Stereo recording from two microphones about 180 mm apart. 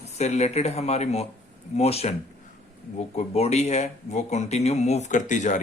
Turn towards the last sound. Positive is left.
turn(degrees=45)  # may be behind; listen again after turning